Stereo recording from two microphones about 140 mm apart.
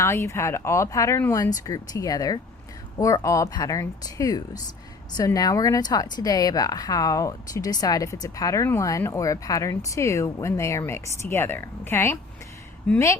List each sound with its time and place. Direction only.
0.0 s a woman's voice: 20° left (ahead or behind)